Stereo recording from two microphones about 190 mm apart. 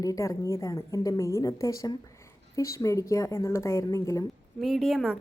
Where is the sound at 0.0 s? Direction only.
15° left (ahead or behind).